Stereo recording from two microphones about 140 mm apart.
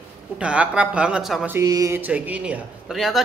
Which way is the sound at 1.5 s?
25° right (ahead or behind).